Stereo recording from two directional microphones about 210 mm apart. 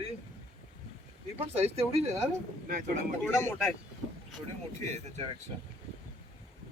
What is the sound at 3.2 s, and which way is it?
Speech, 10° left (ahead or behind).